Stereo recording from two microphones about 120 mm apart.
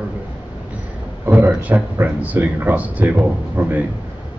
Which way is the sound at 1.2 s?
15° right (ahead or behind).